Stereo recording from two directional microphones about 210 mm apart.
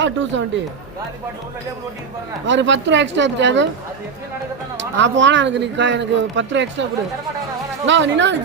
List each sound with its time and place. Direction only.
0.0 s speech: 60° right (ahead or behind)
2.5 s speech: 60° right (ahead or behind)
4.9 s speech: 60° right (ahead or behind)
7.9 s speech: 60° right (ahead or behind)